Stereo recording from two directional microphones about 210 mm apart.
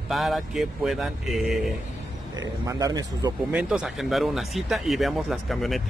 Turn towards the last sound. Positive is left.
turn(degrees=0)  # may be behind; listen again after turning